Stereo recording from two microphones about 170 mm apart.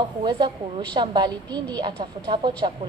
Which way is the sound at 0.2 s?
25° right (ahead or behind).